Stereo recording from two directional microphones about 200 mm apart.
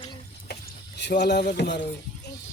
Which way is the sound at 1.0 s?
55° left (ahead or behind).